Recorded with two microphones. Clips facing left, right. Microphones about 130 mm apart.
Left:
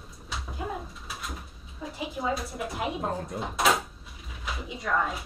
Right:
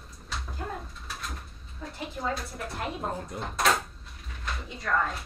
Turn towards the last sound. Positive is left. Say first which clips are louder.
# left 1 dB
turn(degrees=5)  # may be behind; listen again after turning